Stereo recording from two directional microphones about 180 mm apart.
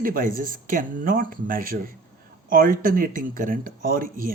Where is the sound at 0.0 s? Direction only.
50° right (ahead or behind).